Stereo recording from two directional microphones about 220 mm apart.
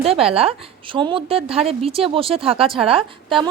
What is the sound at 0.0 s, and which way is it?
Speech, 25° right (ahead or behind).